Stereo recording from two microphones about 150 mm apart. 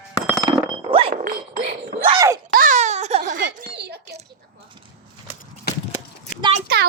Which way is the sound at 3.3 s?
80° right.